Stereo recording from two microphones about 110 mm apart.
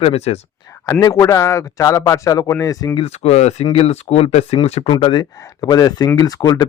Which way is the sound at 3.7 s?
70° left (ahead or behind).